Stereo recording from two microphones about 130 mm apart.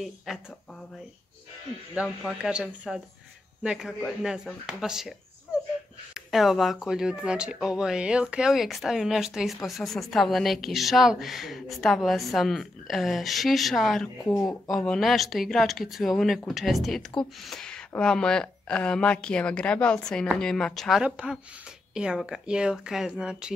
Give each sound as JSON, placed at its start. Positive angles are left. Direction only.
{"t": 0.3, "sound": "a woman's voice", "side_deg": -5}
{"t": 2.0, "sound": "a woman's voice", "side_deg": -5}
{"t": 6.1, "sound": "a woman's voice", "side_deg": 0}
{"t": 21.0, "sound": "speech", "side_deg": -10}